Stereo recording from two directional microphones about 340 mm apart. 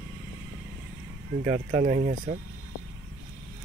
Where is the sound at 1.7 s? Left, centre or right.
Right.